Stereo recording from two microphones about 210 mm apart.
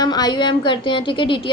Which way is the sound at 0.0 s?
20° left (ahead or behind).